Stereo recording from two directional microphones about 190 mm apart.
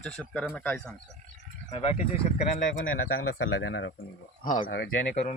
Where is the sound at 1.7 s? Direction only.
35° left (ahead or behind).